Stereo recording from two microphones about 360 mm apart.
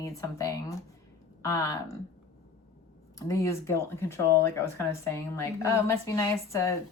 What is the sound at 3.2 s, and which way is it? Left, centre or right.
Speech, centre.